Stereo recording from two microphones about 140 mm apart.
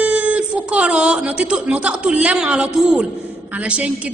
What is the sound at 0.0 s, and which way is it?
A woman's voice, 10° right (ahead or behind).